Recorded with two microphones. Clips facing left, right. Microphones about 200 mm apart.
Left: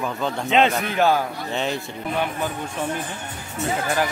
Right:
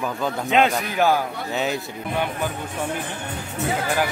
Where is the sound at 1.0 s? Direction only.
15° right (ahead or behind).